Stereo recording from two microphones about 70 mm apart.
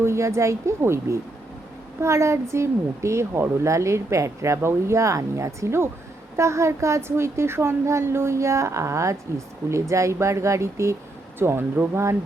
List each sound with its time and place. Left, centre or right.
0.0 s a woman's voice: right
11.3 s speech: right